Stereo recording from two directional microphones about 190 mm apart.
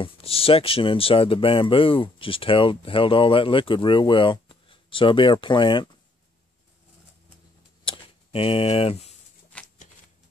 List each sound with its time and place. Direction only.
0.0 s speech: 30° left (ahead or behind)
7.8 s a sound: 30° left (ahead or behind)
9.5 s shuffling cards: 5° left (ahead or behind)